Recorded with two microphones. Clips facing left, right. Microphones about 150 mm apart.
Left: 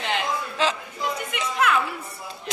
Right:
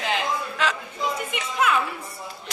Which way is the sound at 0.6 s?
25° left (ahead or behind).